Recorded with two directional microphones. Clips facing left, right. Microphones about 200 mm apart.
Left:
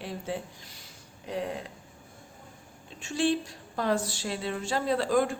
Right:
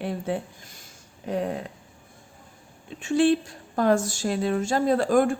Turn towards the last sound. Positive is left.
turn(degrees=-50)  # may be behind; listen again after turning